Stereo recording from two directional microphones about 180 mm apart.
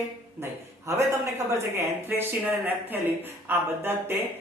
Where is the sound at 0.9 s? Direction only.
15° right (ahead or behind).